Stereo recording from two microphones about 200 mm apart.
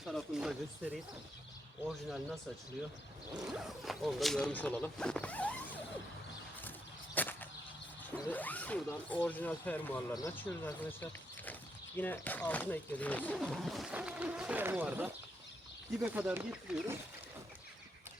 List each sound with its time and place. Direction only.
0.0 s speech: centre (ahead or behind)
2.0 s speech: centre (ahead or behind)
6.7 s a sound: 10° left (ahead or behind)
8.2 s speech: 10° left (ahead or behind)